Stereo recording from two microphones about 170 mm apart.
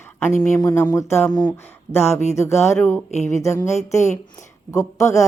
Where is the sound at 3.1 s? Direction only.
40° left (ahead or behind).